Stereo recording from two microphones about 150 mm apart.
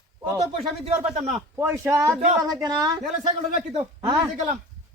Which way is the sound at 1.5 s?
20° right (ahead or behind).